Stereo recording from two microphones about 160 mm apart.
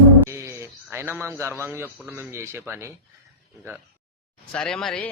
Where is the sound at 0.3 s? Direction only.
20° right (ahead or behind).